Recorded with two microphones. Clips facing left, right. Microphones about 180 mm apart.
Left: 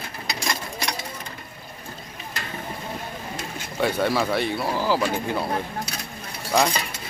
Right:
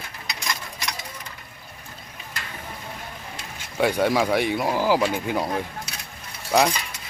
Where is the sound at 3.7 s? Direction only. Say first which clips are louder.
Right 2 dB; 10° right (ahead or behind).